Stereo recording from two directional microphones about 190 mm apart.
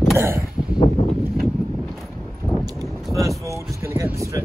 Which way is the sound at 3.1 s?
15° right (ahead or behind).